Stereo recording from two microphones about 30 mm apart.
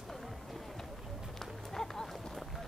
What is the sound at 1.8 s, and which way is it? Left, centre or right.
Run, centre.